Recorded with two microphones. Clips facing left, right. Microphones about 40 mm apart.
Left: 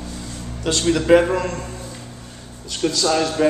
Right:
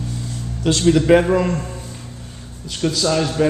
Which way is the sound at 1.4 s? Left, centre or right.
Centre.